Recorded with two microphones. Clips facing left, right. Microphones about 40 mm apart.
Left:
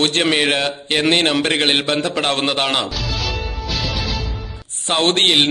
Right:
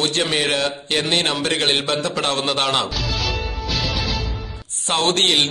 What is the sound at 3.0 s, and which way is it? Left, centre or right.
Music, centre.